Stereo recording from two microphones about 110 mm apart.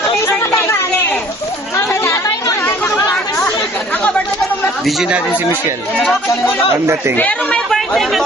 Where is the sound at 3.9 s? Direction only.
10° left (ahead or behind).